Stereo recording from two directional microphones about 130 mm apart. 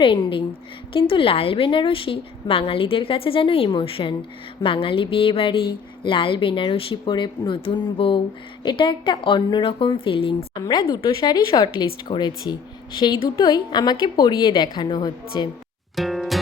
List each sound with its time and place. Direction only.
0.0 s a woman's voice: 40° left (ahead or behind)
10.6 s speech: 30° left (ahead or behind)
16.0 s music: centre (ahead or behind)